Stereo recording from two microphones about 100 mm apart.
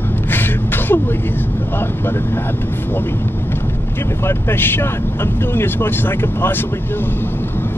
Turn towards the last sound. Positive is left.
turn(degrees=20)  # may be behind; listen again after turning